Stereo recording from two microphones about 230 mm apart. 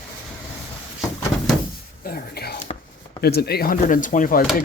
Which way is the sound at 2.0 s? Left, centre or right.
Left.